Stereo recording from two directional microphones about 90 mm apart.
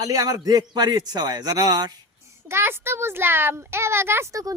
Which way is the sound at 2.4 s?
25° right (ahead or behind).